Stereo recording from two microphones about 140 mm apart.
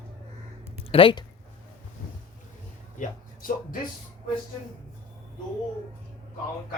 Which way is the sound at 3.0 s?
85° left.